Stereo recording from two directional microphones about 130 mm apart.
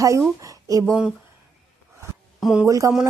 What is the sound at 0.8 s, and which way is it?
Speech, centre (ahead or behind).